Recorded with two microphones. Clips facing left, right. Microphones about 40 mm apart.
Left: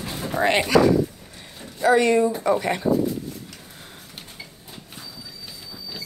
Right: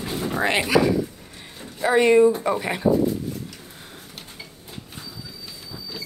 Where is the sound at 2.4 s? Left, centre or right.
Centre.